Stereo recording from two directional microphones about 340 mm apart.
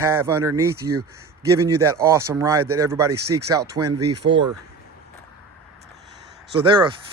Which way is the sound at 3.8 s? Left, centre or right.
Right.